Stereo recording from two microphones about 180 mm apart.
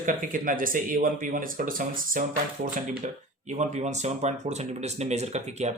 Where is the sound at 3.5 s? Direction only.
40° right (ahead or behind).